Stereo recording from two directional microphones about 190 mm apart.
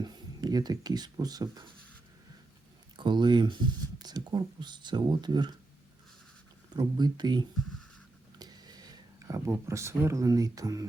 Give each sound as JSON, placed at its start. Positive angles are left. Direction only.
{"t": 0.0, "sound": "speech", "side_deg": -20}
{"t": 3.0, "sound": "speech", "side_deg": -25}
{"t": 6.7, "sound": "speech", "side_deg": -20}